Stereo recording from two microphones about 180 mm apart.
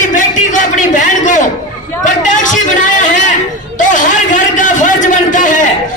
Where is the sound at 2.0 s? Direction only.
45° left (ahead or behind).